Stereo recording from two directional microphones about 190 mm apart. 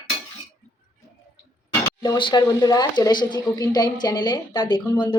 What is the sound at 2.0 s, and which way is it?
Speech, 25° left (ahead or behind).